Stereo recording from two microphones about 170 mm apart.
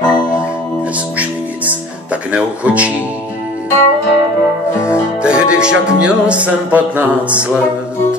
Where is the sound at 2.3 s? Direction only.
10° right (ahead or behind).